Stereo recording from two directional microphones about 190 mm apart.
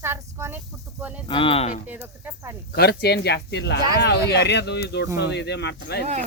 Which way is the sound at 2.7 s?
55° left (ahead or behind).